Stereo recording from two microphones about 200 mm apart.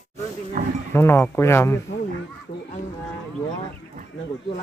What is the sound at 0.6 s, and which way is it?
Livestock, 45° right (ahead or behind).